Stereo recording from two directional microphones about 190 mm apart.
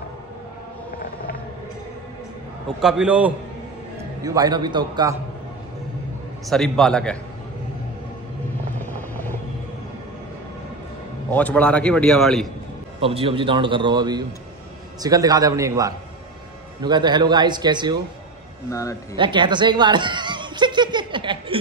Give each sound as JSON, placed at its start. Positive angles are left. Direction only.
{"t": 2.8, "sound": "a man's voice", "side_deg": -5}
{"t": 4.2, "sound": "a man's voice", "side_deg": -20}
{"t": 6.5, "sound": "a man's voice", "side_deg": 0}
{"t": 8.7, "sound": "vehicle", "side_deg": 10}
{"t": 11.2, "sound": "a man's voice", "side_deg": 10}
{"t": 13.0, "sound": "a man's voice", "side_deg": -30}
{"t": 18.7, "sound": "a man's voice", "side_deg": 15}
{"t": 19.1, "sound": "chuckle", "side_deg": -25}